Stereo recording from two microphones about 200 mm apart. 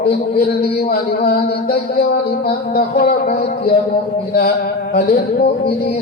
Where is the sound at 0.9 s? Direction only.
50° left (ahead or behind).